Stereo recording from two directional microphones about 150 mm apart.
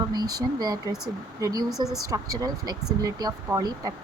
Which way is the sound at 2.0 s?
25° right (ahead or behind).